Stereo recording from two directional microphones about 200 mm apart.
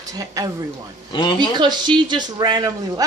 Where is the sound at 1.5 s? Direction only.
20° right (ahead or behind).